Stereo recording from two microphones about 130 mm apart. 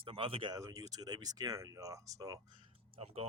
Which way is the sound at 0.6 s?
25° right (ahead or behind).